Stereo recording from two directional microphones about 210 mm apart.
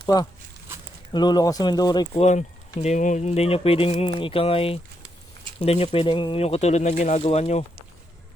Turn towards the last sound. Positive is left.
turn(degrees=30)  # may be behind; listen again after turning